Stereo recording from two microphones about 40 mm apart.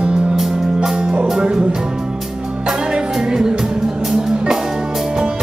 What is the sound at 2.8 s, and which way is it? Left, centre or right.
Music, centre.